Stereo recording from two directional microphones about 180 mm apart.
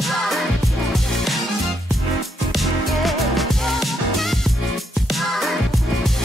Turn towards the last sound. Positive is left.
turn(degrees=0)  # may be behind; listen again after turning